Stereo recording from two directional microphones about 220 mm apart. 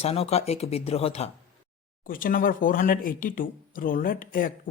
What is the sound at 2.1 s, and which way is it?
Speech, 40° left (ahead or behind).